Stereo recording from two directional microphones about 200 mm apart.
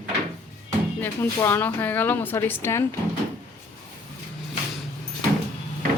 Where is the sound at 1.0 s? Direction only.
10° left (ahead or behind).